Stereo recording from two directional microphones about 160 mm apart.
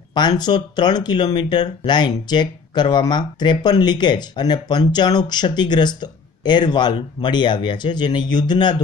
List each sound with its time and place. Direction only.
0.2 s speech: 30° left (ahead or behind)